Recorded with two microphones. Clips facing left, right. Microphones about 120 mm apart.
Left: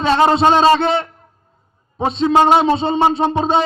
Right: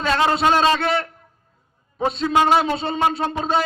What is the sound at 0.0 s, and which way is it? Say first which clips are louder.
A man's voice: left 6 dB; 30° left (ahead or behind).